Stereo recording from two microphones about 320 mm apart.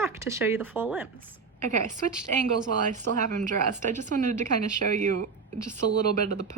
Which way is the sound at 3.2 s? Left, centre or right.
Right.